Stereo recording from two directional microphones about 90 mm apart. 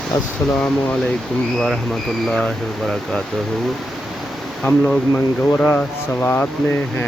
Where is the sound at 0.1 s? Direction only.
50° left (ahead or behind).